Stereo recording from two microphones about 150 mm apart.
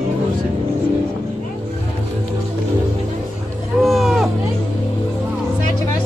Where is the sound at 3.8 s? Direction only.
Centre (ahead or behind).